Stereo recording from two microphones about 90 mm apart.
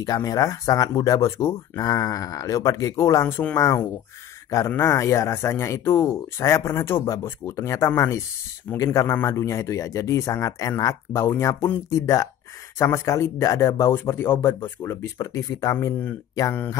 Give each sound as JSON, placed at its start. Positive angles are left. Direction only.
{"t": 0.0, "sound": "speech", "side_deg": 45}